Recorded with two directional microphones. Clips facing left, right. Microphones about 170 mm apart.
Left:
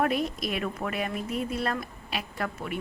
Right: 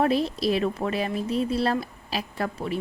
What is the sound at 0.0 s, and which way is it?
A woman's voice, 30° right (ahead or behind).